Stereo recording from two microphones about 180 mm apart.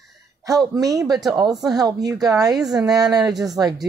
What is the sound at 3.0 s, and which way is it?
Speech, 20° right (ahead or behind).